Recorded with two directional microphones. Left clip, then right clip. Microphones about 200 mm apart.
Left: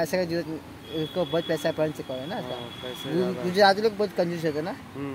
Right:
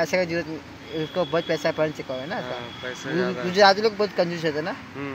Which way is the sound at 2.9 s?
25° left (ahead or behind).